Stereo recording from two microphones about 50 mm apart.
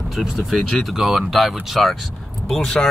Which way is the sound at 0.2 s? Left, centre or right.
Centre.